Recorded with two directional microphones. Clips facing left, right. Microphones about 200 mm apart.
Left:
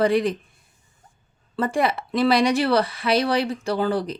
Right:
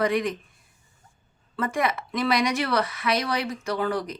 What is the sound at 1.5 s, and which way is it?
Speech, 30° left (ahead or behind).